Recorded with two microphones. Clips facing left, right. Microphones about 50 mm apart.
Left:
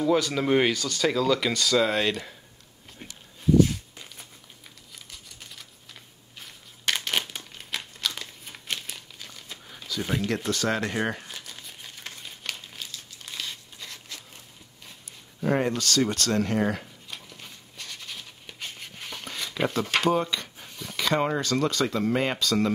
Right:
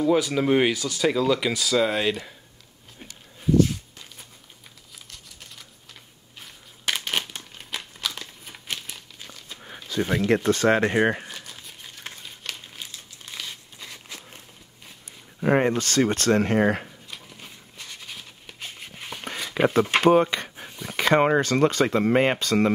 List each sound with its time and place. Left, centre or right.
0.0 s speech: centre
4.9 s crumpling: centre
9.9 s a sound: right
10.2 s speech: right
11.2 s crumpling: centre
13.2 s crumpling: centre
15.4 s speech: right
17.3 s a sound: centre
19.5 s speech: right